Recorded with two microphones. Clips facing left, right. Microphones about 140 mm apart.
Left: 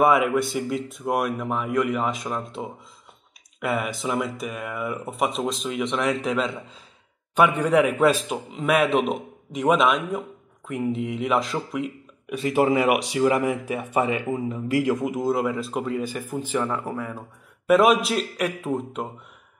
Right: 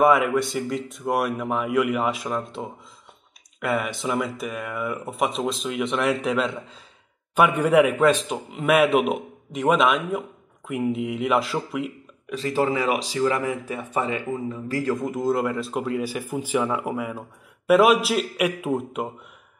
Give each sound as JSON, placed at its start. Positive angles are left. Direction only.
{"t": 0.0, "sound": "a man's voice", "side_deg": 0}
{"t": 12.3, "sound": "speech", "side_deg": 10}
{"t": 12.9, "sound": "speech", "side_deg": 65}
{"t": 13.2, "sound": "a man's voice", "side_deg": 15}